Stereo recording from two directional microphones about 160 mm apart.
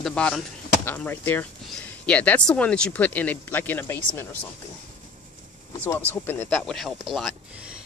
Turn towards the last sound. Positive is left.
turn(degrees=0)  # may be behind; listen again after turning